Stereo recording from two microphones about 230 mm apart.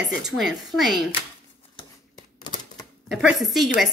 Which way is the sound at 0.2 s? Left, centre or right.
Centre.